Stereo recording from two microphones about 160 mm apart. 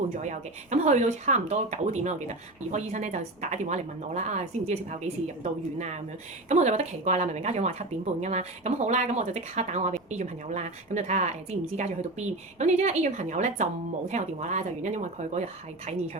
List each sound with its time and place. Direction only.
0.2 s speech: 45° right (ahead or behind)
12.5 s a woman's voice: 45° right (ahead or behind)